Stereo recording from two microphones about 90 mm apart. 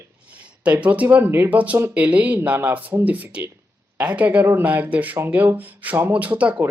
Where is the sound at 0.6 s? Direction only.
15° right (ahead or behind).